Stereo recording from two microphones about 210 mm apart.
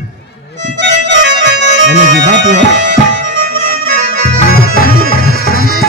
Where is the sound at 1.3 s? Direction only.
55° right (ahead or behind).